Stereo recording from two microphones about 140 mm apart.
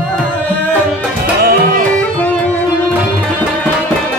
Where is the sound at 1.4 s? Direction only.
90° right.